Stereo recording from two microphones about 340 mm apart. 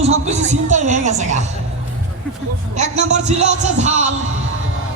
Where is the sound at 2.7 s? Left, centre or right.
Centre.